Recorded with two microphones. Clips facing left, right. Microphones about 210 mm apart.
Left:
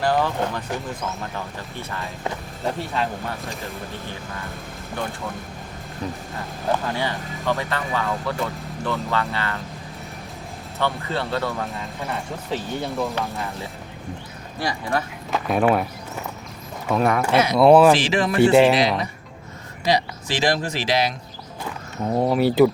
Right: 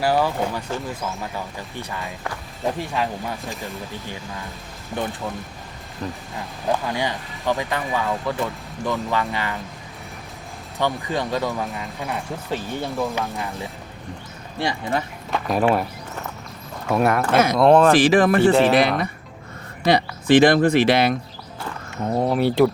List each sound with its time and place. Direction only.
0.0 s speech: 10° right (ahead or behind)
2.7 s speech: 15° right (ahead or behind)
3.4 s speech: centre (ahead or behind)
6.7 s speech: 15° right (ahead or behind)
10.8 s speech: 15° right (ahead or behind)
11.6 s speech: centre (ahead or behind)
13.3 s speech: 15° right (ahead or behind)
15.3 s speech: centre (ahead or behind)
17.3 s speech: 50° right (ahead or behind)
17.6 s speech: 5° left (ahead or behind)
17.9 s speech: 55° right (ahead or behind)
18.4 s speech: 10° left (ahead or behind)
18.7 s speech: 55° right (ahead or behind)
22.1 s speech: centre (ahead or behind)